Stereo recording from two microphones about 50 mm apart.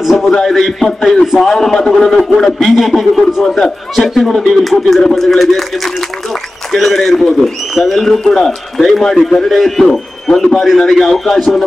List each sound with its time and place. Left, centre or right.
0.0 s a man's voice: centre
0.3 s a man's voice: centre
6.7 s a man's voice: centre